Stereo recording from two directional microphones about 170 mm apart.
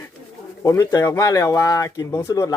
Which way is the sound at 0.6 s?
20° left (ahead or behind).